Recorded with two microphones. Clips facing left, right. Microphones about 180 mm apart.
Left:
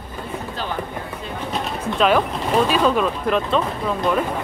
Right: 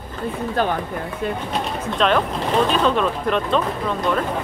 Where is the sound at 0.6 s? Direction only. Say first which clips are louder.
Right 9 dB; 55° right (ahead or behind).